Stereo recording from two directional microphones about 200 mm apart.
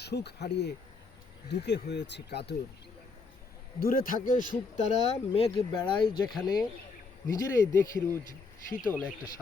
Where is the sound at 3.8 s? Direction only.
45° left (ahead or behind); by 6.1 s 25° left (ahead or behind).